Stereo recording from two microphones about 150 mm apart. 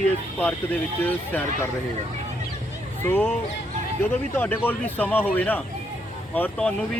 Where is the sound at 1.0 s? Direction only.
10° left (ahead or behind).